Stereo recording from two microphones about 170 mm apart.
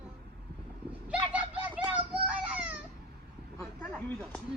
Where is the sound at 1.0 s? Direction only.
10° right (ahead or behind).